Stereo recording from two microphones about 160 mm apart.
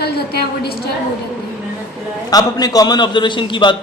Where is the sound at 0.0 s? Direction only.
80° left.